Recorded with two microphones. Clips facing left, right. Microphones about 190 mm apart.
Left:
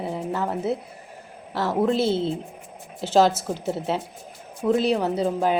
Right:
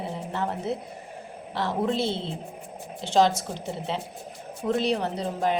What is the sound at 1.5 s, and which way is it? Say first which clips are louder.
A woman's voice: left 4 dB; 5° left (ahead or behind).